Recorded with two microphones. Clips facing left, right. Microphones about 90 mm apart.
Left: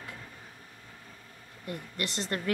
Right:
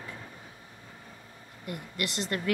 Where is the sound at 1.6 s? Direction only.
35° left (ahead or behind).